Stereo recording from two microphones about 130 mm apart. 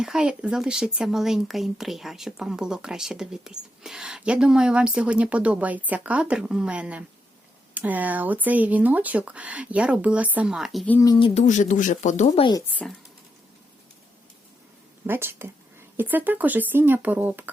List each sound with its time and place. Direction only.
0.0 s speech: 5° right (ahead or behind)
11.3 s speech: 70° left (ahead or behind)
15.0 s speech: 15° right (ahead or behind)